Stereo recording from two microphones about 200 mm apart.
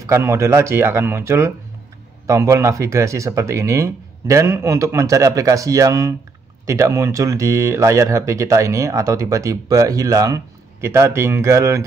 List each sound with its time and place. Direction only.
0.0 s speech: 15° right (ahead or behind)